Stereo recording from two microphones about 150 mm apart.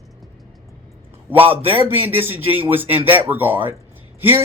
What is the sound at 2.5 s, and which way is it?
Speech, 40° right (ahead or behind).